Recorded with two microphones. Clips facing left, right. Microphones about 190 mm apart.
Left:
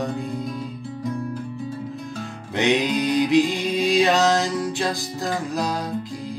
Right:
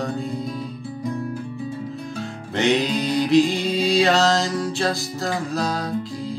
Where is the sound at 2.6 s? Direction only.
15° left (ahead or behind).